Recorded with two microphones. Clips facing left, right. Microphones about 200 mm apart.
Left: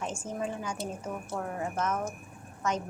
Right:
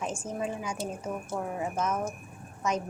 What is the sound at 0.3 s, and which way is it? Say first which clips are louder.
A woman's voice: even; 10° right (ahead or behind).